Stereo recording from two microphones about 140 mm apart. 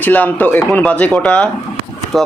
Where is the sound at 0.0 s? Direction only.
10° left (ahead or behind).